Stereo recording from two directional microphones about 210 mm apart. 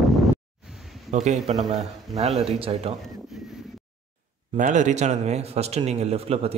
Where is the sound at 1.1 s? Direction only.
35° right (ahead or behind).